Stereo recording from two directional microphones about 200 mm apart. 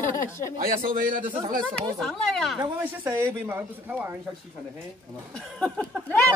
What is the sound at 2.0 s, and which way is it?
Speech, centre (ahead or behind).